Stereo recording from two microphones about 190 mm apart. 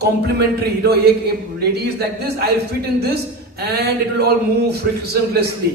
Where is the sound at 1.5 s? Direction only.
60° right (ahead or behind).